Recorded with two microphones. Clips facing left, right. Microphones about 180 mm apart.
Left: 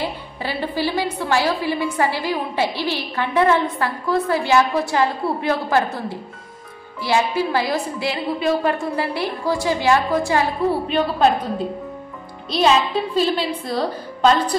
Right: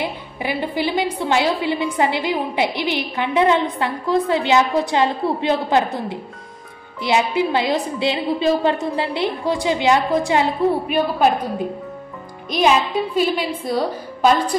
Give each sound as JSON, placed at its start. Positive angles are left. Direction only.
{"t": 0.0, "sound": "a woman's voice", "side_deg": -15}